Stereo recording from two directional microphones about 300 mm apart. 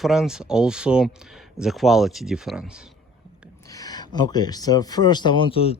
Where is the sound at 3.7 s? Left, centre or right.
Centre.